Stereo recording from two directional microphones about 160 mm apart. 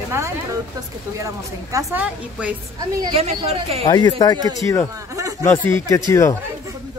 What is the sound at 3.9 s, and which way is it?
Speech, 25° left (ahead or behind).